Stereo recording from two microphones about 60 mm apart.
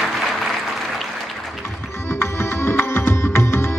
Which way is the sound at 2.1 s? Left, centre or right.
Left.